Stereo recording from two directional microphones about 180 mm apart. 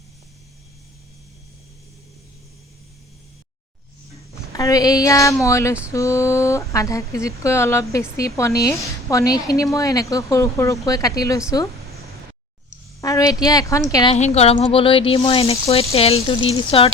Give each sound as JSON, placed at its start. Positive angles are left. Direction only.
{"t": 4.5, "sound": "speech", "side_deg": 20}
{"t": 13.0, "sound": "speech", "side_deg": 20}
{"t": 14.1, "sound": "speech", "side_deg": 35}